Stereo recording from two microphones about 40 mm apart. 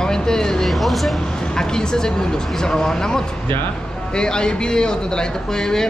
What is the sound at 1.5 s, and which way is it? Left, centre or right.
Speech, centre.